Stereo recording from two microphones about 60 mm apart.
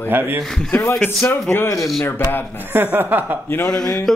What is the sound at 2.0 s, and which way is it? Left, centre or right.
Speech, left.